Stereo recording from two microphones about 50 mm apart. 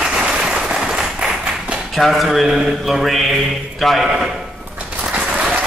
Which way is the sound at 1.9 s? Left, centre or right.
Centre.